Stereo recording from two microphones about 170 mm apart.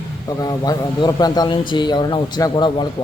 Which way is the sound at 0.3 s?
20° left (ahead or behind).